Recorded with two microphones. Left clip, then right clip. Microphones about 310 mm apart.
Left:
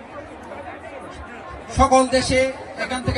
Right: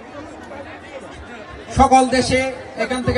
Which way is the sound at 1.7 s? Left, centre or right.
Centre.